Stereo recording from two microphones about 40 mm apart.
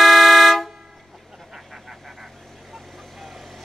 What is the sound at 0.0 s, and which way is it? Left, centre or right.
Vehicle horn, centre.